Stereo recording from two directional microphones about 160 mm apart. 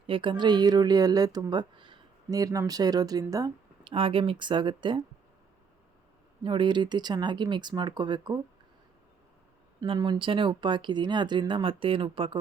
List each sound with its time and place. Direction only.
0.1 s speech: 30° right (ahead or behind)
3.8 s speech: 35° right (ahead or behind)
6.4 s speech: 30° right (ahead or behind)
9.8 s speech: 30° right (ahead or behind)